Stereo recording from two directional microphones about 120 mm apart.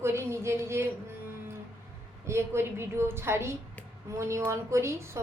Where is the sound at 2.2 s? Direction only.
20° right (ahead or behind).